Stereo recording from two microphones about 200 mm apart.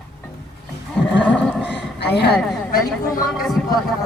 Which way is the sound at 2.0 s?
55° left (ahead or behind).